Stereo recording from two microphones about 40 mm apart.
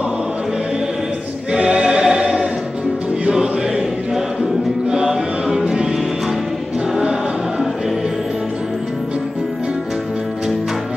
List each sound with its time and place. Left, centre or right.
1.5 s choir: right
4.8 s chant: right
5.6 s music: centre